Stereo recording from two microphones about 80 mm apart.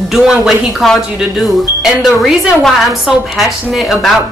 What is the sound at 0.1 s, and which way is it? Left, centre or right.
A woman's voice, centre.